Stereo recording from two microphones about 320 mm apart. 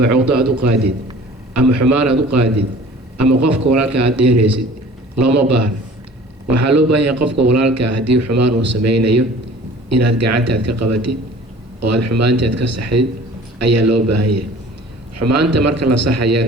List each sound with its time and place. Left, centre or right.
0.0 s a man's voice: right